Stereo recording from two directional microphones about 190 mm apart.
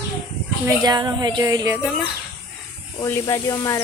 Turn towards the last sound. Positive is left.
turn(degrees=15)  # may be behind; listen again after turning